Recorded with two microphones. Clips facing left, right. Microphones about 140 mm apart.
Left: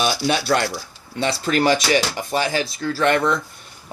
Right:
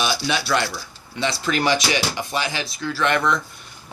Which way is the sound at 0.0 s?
45° left (ahead or behind).